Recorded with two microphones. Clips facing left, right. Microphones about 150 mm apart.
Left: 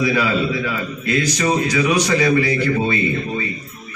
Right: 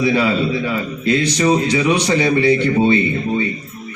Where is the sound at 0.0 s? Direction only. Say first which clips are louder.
Right 2 dB; 30° right (ahead or behind).